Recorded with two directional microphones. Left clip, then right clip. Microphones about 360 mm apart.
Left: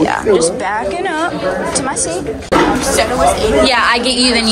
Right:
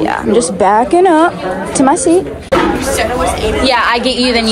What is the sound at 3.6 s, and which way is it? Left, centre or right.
Speech, centre.